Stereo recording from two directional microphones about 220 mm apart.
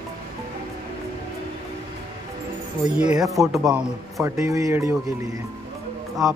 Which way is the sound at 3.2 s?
Centre (ahead or behind).